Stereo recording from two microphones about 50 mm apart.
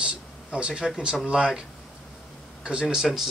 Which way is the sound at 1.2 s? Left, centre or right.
Centre.